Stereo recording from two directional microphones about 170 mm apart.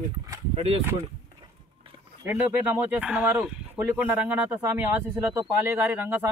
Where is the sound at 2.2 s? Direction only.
10° right (ahead or behind).